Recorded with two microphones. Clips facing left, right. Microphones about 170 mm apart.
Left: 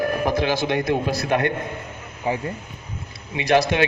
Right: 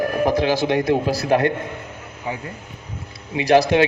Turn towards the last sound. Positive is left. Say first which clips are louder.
# right 4 dB
turn(degrees=-35)  # may be behind; listen again after turning